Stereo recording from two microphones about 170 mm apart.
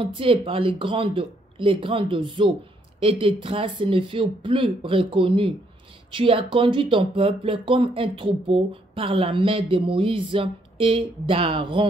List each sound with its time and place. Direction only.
0.0 s speech: 30° right (ahead or behind)